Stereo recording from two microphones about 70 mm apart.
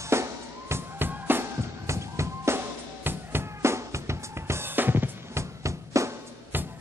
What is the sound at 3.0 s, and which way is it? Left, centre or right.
Drum, right.